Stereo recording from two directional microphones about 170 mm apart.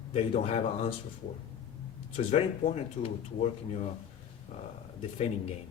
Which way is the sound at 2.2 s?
35° left (ahead or behind).